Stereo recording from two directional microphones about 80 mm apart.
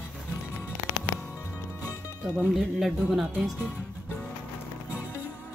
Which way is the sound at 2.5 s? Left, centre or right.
Centre.